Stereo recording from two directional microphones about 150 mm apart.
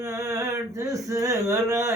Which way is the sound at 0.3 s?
20° right (ahead or behind).